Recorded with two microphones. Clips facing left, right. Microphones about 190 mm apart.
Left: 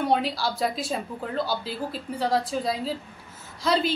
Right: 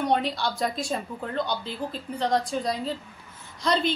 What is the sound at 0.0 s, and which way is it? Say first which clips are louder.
A woman's voice: left 1 dB; 5° left (ahead or behind).